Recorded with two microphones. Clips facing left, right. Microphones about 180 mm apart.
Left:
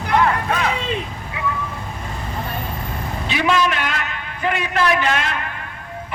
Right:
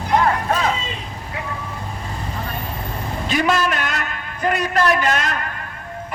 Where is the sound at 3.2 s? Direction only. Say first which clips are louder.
Even; 45° right (ahead or behind).